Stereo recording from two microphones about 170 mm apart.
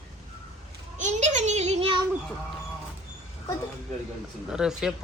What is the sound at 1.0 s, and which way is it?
Speech, 45° right (ahead or behind).